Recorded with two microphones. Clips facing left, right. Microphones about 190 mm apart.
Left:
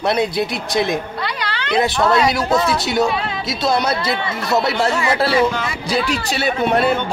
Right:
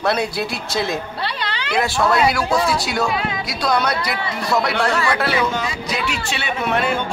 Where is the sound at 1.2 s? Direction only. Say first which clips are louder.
Left 1 dB; 25° right (ahead or behind).